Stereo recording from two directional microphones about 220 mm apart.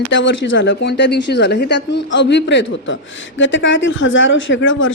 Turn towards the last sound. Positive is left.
turn(degrees=60)  # may be behind; listen again after turning